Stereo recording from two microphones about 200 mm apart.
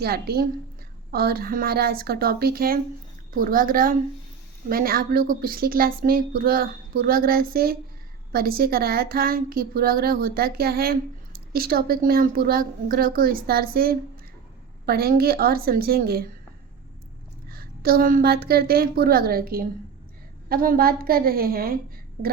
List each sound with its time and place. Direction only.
0.0 s a woman's voice: 50° right (ahead or behind)
17.5 s a woman's voice: 50° right (ahead or behind)